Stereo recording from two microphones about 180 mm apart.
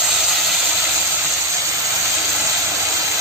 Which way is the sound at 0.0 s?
Centre (ahead or behind).